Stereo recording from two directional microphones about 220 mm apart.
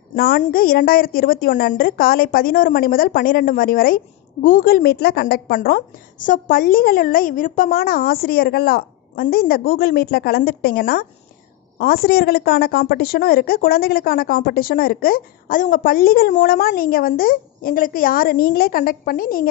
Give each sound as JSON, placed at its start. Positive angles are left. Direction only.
{"t": 0.1, "sound": "a woman's voice", "side_deg": 40}